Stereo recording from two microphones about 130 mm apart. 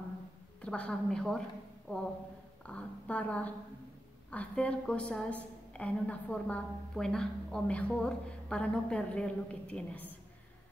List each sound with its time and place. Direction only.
0.6 s a woman's voice: 10° left (ahead or behind)